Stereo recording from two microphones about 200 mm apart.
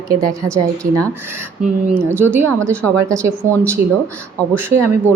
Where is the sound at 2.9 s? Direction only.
15° right (ahead or behind).